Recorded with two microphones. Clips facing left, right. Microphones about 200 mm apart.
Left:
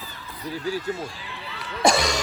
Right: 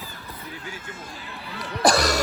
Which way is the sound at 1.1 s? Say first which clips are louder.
Right 1 dB; 45° right (ahead or behind).